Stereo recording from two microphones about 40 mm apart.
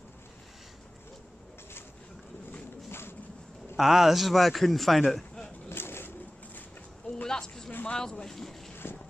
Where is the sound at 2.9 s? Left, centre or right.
Left.